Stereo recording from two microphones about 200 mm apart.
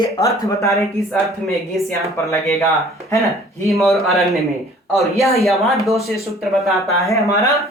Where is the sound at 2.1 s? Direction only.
15° left (ahead or behind).